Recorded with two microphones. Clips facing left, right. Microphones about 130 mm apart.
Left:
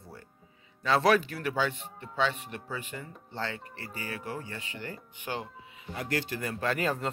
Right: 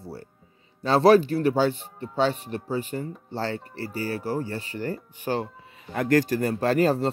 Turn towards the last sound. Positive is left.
turn(degrees=-35)  # may be behind; listen again after turning